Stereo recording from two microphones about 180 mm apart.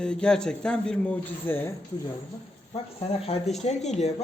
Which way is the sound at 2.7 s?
30° left (ahead or behind).